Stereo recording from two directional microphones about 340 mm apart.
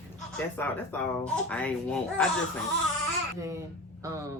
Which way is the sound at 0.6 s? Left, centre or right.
Centre.